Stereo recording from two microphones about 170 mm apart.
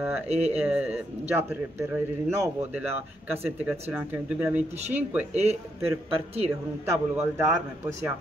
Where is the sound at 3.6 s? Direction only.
10° right (ahead or behind).